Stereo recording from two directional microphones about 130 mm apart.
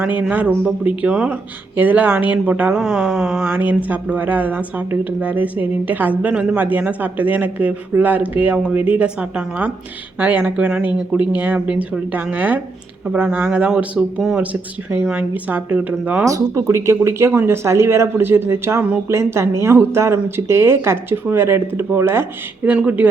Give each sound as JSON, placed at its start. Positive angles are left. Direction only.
{"t": 0.0, "sound": "a woman's voice", "side_deg": -10}
{"t": 2.8, "sound": "speech", "side_deg": 0}
{"t": 3.4, "sound": "a woman's voice", "side_deg": -15}
{"t": 16.2, "sound": "speech", "side_deg": -25}